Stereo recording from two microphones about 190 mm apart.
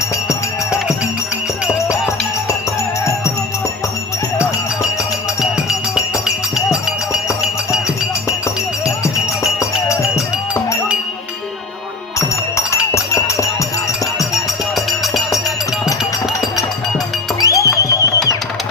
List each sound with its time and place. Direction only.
12.5 s music: 15° left (ahead or behind)
14.3 s music: centre (ahead or behind)
17.4 s music: 15° left (ahead or behind)